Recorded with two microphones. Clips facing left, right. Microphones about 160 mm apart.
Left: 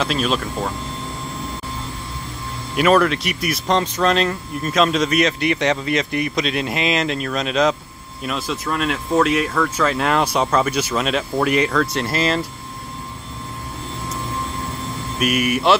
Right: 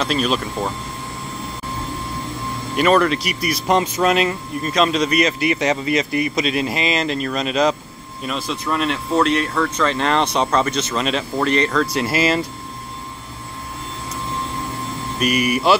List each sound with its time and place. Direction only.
0.0 s speech: centre (ahead or behind)
2.7 s speech: centre (ahead or behind)
3.6 s speech: 10° right (ahead or behind)
15.1 s speech: 5° left (ahead or behind)